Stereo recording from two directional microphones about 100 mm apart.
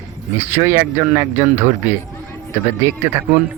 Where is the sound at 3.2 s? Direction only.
20° right (ahead or behind).